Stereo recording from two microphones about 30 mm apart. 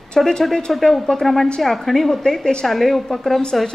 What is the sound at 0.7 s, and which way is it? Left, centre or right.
A woman's voice, centre.